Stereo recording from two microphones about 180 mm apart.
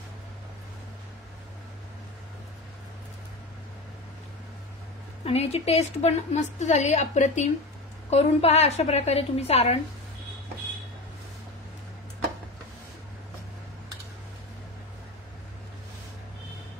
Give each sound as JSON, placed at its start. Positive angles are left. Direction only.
{"t": 5.2, "sound": "a woman's voice", "side_deg": 35}